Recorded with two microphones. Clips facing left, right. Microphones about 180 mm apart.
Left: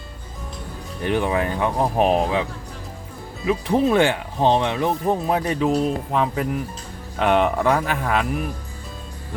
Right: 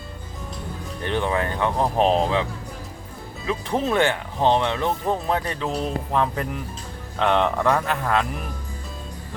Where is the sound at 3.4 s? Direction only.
15° left (ahead or behind).